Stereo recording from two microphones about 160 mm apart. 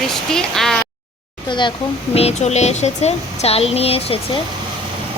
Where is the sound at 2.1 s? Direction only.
40° left (ahead or behind).